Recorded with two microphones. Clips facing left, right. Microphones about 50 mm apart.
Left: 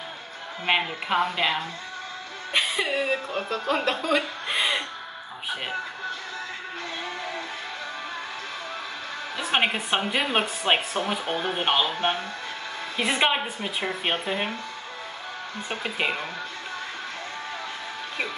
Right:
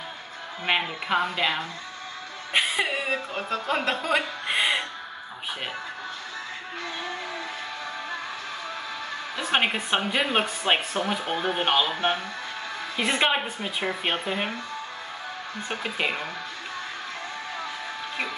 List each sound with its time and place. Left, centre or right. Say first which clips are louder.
0.7 s speech: left 1 dB; centre
2.5 s a woman's voice: even; centre
3.4 s speech: left 1 dB; right
4.1 s chuckle: even; centre
9.4 s speech: even; centre
15.7 s speech: left 1 dB; centre